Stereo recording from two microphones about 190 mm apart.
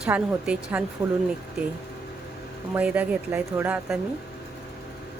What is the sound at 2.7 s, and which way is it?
A woman's voice, 5° right (ahead or behind).